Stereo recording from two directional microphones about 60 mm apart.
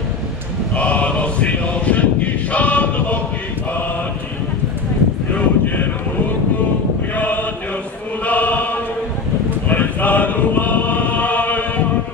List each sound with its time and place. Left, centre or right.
0.7 s chant: left
5.3 s a sound: left
7.2 s chant: left
9.7 s choir: left